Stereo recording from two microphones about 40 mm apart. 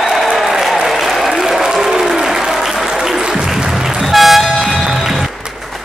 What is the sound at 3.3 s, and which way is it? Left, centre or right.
Toot, centre.